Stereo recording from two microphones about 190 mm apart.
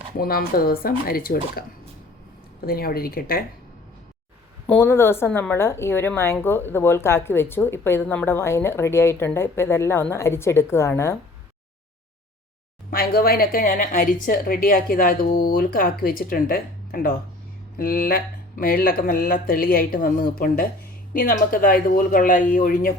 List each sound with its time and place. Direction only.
0.2 s a woman's voice: 50° left (ahead or behind)
4.6 s speech: 10° left (ahead or behind)
12.9 s a woman's voice: 55° left (ahead or behind)